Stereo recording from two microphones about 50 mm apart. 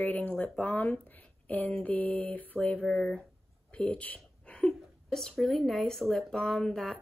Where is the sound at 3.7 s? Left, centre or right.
Left.